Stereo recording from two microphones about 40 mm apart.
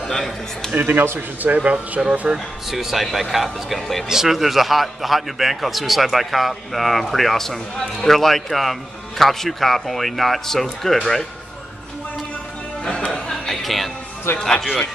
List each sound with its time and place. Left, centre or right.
0.0 s a man's voice: centre
0.7 s a man's voice: right
1.6 s speech: right
2.3 s a man's voice: centre
12.8 s music: centre
13.5 s music: centre
14.3 s speech: left